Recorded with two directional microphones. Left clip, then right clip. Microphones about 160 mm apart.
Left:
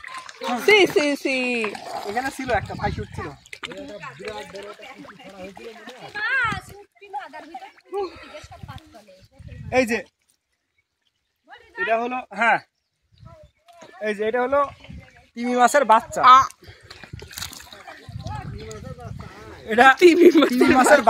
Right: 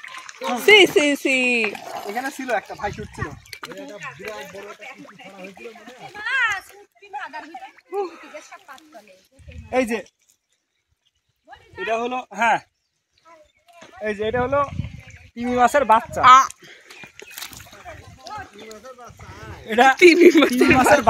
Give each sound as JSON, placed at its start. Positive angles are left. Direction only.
{"t": 0.7, "sound": "speech", "side_deg": -15}
{"t": 6.1, "sound": "a child's voice", "side_deg": 60}
{"t": 9.7, "sound": "speech", "side_deg": 10}
{"t": 11.9, "sound": "speech", "side_deg": 10}
{"t": 14.0, "sound": "speech", "side_deg": 5}
{"t": 19.7, "sound": "a man's voice", "side_deg": 0}